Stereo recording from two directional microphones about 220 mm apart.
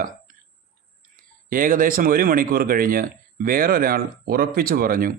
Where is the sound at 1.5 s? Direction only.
40° right (ahead or behind).